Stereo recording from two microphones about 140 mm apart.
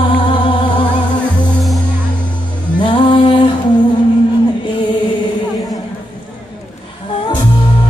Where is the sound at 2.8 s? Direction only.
35° left (ahead or behind).